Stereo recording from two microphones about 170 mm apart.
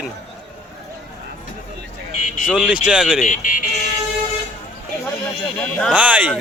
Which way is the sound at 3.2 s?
50° left (ahead or behind).